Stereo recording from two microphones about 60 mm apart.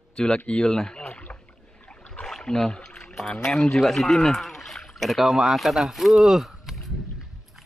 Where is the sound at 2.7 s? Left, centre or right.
Centre.